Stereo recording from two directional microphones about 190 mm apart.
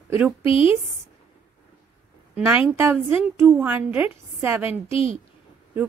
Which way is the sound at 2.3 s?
10° right (ahead or behind).